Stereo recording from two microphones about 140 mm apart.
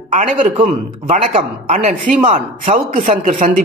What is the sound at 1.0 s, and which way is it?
A man's voice, 60° right (ahead or behind).